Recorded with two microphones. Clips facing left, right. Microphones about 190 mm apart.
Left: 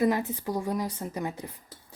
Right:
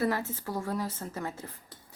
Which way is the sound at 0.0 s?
15° left (ahead or behind).